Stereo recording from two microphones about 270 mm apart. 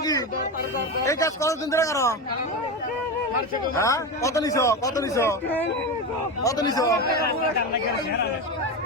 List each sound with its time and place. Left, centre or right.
0.0 s a sound: centre
1.0 s a man's voice: centre
3.8 s a man's voice: centre
7.0 s a man's voice: left